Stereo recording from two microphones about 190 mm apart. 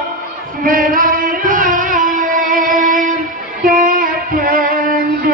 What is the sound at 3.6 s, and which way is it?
Female singing, 45° right (ahead or behind).